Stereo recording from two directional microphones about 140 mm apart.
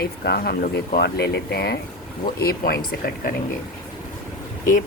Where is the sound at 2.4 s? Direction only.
90° left.